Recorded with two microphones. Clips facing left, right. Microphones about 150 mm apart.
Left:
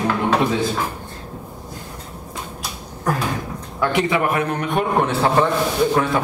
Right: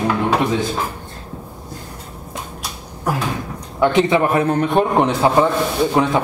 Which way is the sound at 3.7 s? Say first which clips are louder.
Right 5 dB; 25° right (ahead or behind).